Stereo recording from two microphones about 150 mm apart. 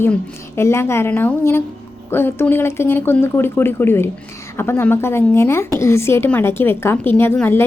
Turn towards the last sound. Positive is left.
turn(degrees=15)  # may be behind; listen again after turning